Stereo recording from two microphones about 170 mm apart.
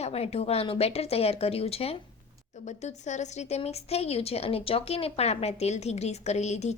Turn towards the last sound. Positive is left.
turn(degrees=40)  # may be behind; listen again after turning